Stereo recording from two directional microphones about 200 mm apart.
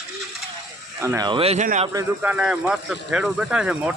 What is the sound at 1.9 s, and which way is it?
Speech, 10° right (ahead or behind).